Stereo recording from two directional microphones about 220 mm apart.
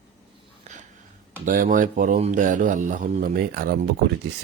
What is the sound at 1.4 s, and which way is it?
Speech, 40° right (ahead or behind).